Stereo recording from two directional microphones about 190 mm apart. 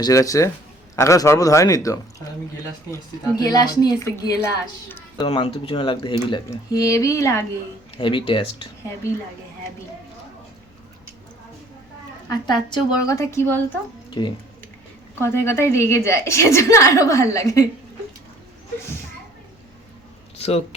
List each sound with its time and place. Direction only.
0.0 s a woman's voice: 15° left (ahead or behind)
7.9 s speech: 25° left (ahead or behind)
12.3 s speech: 25° left (ahead or behind)
15.2 s a woman's voice: 15° left (ahead or behind)